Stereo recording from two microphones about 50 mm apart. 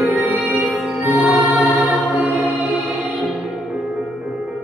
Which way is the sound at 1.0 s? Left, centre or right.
Right.